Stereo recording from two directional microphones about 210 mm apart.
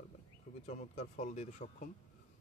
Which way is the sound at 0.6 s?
35° left (ahead or behind).